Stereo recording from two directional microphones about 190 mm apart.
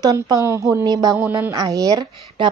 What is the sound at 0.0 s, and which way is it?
A woman's voice, 20° right (ahead or behind).